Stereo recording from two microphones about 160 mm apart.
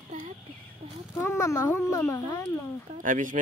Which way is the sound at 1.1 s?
15° left (ahead or behind).